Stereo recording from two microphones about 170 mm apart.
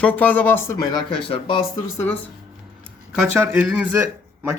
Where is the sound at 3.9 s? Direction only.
15° right (ahead or behind).